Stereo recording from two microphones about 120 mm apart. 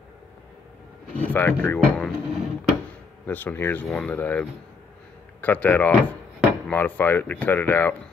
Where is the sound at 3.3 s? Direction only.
15° left (ahead or behind).